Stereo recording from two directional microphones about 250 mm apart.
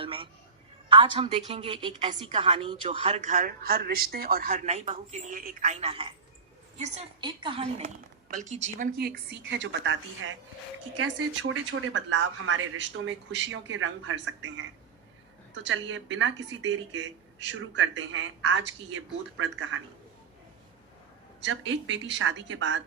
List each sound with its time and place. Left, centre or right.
0.0 s a sound: right
0.9 s a woman's voice: centre; by 14.6 s right
15.6 s a woman's voice: right
21.4 s a woman's voice: right